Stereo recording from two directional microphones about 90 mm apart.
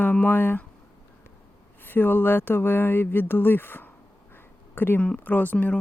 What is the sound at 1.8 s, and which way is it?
Speech, 20° left (ahead or behind).